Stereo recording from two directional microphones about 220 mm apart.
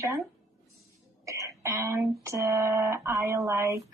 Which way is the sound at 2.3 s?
15° right (ahead or behind).